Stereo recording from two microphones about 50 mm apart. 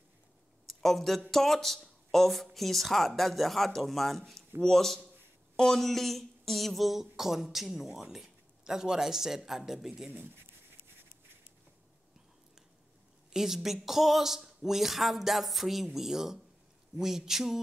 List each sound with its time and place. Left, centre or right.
0.7 s speech: centre
10.1 s speech: right
13.3 s speech: centre
16.9 s a sound: centre